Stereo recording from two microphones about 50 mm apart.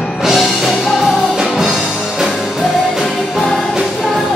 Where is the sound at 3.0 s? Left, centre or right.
Centre.